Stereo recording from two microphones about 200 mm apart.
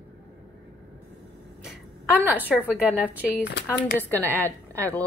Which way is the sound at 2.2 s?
10° right (ahead or behind).